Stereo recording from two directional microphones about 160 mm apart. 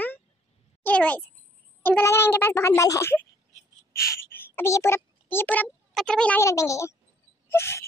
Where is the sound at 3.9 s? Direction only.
15° left (ahead or behind).